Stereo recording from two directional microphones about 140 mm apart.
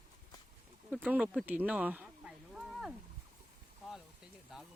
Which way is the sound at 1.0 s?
10° right (ahead or behind).